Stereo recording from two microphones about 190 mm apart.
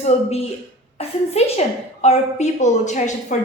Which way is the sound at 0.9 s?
30° left (ahead or behind).